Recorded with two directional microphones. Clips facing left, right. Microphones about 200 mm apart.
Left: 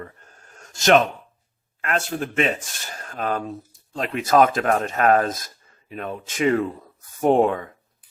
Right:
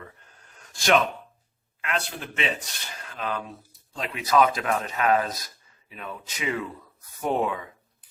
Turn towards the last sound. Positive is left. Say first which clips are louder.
# left 8 dB
turn(degrees=50)  # may be behind; listen again after turning